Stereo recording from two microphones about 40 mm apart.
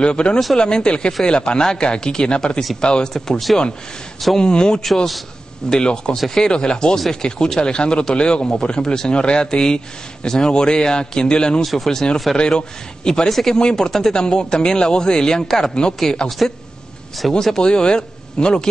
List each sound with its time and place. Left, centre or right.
0.0 s speech: left
4.4 s speech: left
6.1 s speech: centre
6.4 s speech: left
11.6 s speech: centre
13.3 s speech: centre
13.6 s a man's voice: centre